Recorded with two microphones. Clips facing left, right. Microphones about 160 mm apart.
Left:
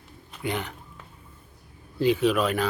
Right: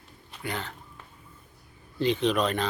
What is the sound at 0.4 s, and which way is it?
Speech, 20° left (ahead or behind).